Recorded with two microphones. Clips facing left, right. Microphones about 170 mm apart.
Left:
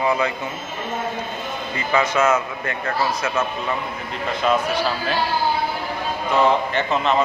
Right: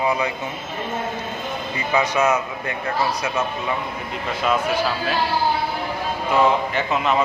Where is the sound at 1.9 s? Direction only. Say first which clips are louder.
Left 1 dB; 15° right (ahead or behind).